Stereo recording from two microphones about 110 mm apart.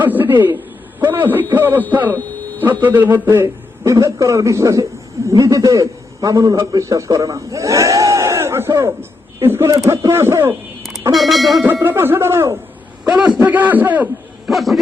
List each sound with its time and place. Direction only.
0.0 s a man's voice: 15° right (ahead or behind)
11.1 s speech: centre (ahead or behind)
11.6 s speech: 20° right (ahead or behind)
13.1 s a man's voice: 10° right (ahead or behind)
14.5 s speech: centre (ahead or behind)